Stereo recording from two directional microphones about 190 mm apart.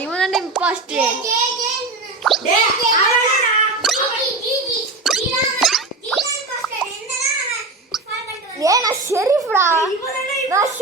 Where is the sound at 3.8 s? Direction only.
Centre (ahead or behind).